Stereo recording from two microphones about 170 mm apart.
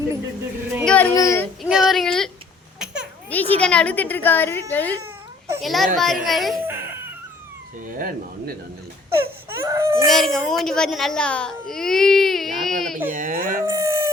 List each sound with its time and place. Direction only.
0.9 s a child's voice: 10° left (ahead or behind)
1.6 s a child's voice: centre (ahead or behind)
2.7 s babbling: 5° right (ahead or behind)
3.2 s a child's voice: 10° left (ahead or behind)
5.6 s a child's voice: centre (ahead or behind)
6.7 s a sound: 15° right (ahead or behind)
7.9 s speech: 60° right (ahead or behind)
9.1 s speech: 15° right (ahead or behind)
10.1 s a child's voice: centre (ahead or behind)
11.7 s baby cry: centre (ahead or behind)
13.1 s speech: 55° right (ahead or behind)
13.6 s howl: 20° right (ahead or behind)